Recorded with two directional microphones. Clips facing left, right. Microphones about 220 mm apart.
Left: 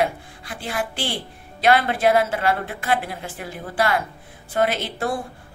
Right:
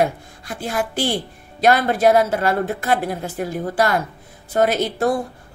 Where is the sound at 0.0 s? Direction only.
45° right (ahead or behind).